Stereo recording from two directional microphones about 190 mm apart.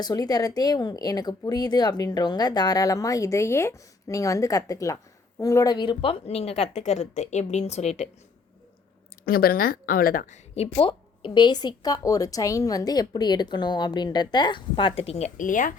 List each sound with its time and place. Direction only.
0.0 s a woman's voice: 20° left (ahead or behind); by 8.1 s 35° left (ahead or behind)
9.2 s a woman's voice: 50° left (ahead or behind)